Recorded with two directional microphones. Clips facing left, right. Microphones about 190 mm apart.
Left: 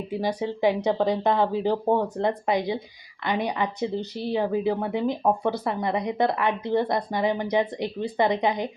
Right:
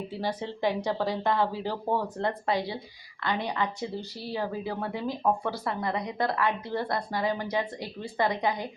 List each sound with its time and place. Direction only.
0.1 s speech: 15° left (ahead or behind)